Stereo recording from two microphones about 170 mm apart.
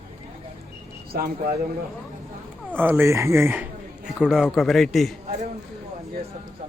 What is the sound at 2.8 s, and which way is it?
Speech, 10° right (ahead or behind).